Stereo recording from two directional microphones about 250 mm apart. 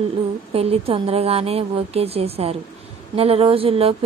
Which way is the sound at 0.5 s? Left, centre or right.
Right.